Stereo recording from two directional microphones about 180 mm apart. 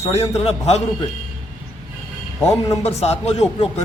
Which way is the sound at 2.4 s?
15° left (ahead or behind).